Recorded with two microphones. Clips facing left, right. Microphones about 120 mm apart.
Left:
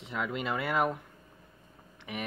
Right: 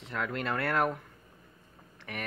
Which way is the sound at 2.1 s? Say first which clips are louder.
Left 2 dB; 10° left (ahead or behind).